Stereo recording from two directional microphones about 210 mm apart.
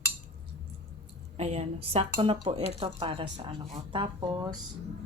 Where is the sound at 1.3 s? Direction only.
30° right (ahead or behind).